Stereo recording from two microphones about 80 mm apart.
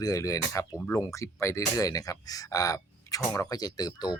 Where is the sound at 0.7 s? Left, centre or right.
Left.